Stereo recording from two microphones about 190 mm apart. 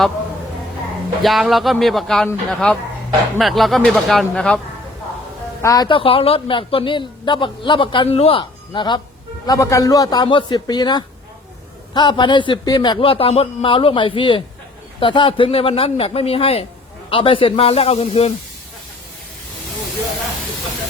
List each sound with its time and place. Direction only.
1.2 s speech: centre (ahead or behind)
5.6 s speech: 20° left (ahead or behind)